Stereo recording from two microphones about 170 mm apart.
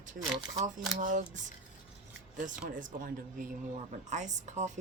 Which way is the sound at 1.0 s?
50° right (ahead or behind).